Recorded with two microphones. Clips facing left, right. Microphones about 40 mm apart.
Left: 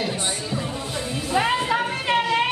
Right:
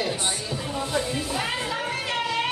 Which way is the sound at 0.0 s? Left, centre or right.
Centre.